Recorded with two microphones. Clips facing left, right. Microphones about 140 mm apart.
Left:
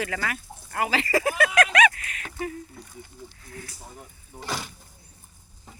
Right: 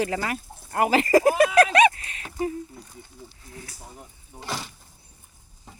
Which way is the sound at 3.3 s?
25° right (ahead or behind).